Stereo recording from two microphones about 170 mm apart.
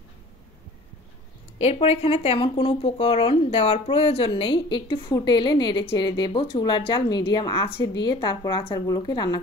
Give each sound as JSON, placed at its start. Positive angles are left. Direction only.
{"t": 1.6, "sound": "a woman's voice", "side_deg": 40}